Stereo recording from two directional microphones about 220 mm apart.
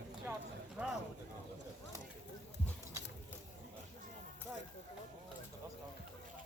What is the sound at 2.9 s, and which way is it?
Ratchet, 15° right (ahead or behind).